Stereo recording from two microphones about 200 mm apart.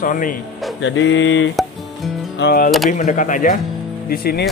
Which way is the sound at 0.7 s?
70° left (ahead or behind).